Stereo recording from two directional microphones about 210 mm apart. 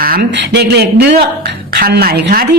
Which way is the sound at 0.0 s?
45° right (ahead or behind).